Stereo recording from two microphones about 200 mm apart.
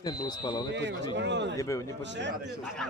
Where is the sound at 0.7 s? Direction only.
60° right (ahead or behind).